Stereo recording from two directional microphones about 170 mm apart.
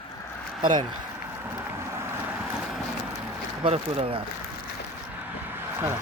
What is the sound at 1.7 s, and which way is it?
Vehicle, 15° right (ahead or behind).